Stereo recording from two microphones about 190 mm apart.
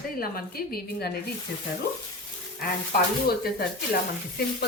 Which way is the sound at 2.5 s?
55° left (ahead or behind).